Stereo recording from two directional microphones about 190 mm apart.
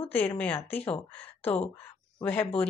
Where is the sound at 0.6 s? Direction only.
10° left (ahead or behind).